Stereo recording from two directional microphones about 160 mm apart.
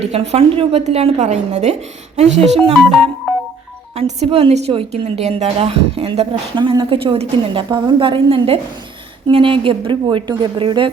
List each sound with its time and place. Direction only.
0.1 s a woman's voice: 40° right (ahead or behind)
3.9 s a woman's voice: 40° right (ahead or behind)